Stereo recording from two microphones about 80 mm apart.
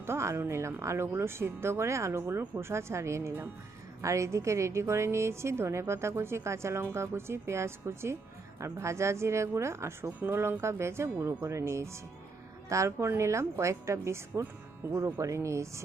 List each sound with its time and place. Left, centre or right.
0.0 s a woman's voice: right